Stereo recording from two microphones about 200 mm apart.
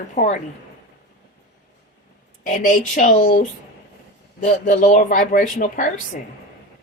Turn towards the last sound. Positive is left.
turn(degrees=40)  # may be behind; listen again after turning